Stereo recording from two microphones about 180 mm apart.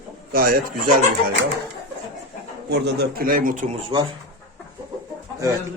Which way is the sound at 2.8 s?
60° right (ahead or behind).